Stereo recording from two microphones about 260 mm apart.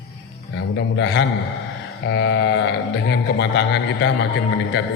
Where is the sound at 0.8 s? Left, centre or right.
Left.